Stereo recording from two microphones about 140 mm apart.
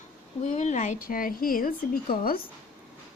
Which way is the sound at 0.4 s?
55° left (ahead or behind).